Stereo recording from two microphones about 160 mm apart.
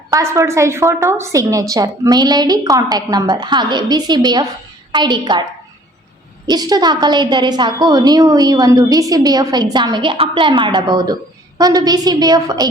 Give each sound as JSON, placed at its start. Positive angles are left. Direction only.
{"t": 0.1, "sound": "a woman's voice", "side_deg": -20}
{"t": 6.5, "sound": "a woman's voice", "side_deg": -25}